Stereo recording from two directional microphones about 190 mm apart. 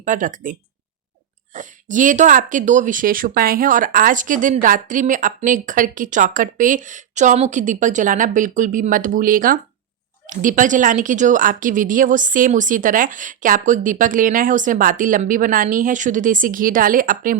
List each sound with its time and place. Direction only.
0.0 s speech: 40° right (ahead or behind)
1.5 s speech: 40° right (ahead or behind)